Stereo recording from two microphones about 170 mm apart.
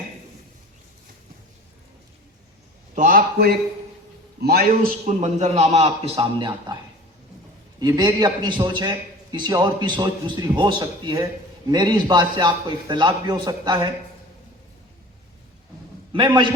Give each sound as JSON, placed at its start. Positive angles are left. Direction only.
{"t": 2.9, "sound": "a man's voice", "side_deg": -50}
{"t": 5.0, "sound": "a man's voice", "side_deg": -45}
{"t": 7.8, "sound": "a man's voice", "side_deg": -25}
{"t": 16.1, "sound": "a man's voice", "side_deg": -30}